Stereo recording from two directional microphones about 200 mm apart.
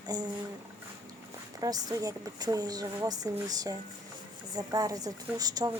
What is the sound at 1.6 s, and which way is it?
A woman's voice, 20° right (ahead or behind).